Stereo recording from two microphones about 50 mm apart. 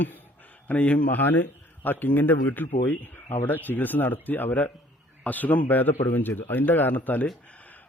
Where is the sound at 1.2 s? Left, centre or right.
Left.